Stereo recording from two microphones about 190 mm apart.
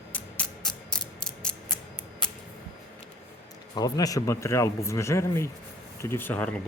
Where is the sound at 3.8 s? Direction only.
20° left (ahead or behind).